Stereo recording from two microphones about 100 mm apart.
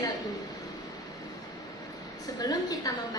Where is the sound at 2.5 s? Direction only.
35° left (ahead or behind).